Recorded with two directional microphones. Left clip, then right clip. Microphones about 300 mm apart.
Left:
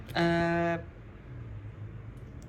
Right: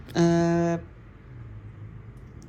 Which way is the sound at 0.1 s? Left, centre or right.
Centre.